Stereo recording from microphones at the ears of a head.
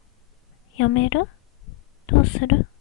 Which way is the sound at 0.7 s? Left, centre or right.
Left.